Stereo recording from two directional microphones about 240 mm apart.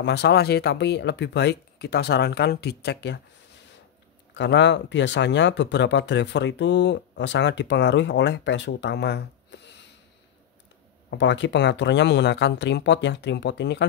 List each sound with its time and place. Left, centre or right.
0.0 s speech: left
4.3 s speech: left
11.1 s speech: left